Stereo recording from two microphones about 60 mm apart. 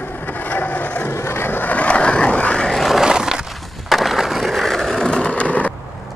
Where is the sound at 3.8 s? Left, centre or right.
Centre.